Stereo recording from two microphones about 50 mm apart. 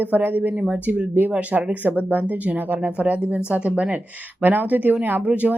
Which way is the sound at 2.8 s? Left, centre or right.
Right.